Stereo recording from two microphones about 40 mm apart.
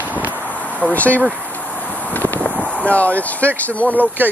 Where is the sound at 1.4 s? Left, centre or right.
Left.